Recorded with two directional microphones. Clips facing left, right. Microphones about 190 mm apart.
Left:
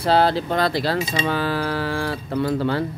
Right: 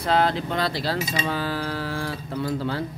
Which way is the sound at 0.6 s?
55° left (ahead or behind).